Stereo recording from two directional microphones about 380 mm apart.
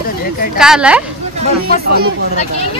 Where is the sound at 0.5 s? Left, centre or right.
Centre.